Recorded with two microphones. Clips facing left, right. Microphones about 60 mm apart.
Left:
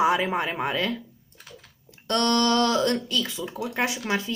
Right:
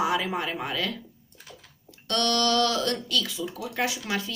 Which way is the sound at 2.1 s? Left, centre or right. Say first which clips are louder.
Left 3 dB; left.